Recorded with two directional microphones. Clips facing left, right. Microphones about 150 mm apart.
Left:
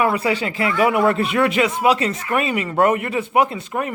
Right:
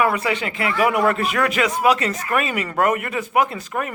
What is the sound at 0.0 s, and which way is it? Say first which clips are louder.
A woman's voice: left 1 dB; 30° left (ahead or behind).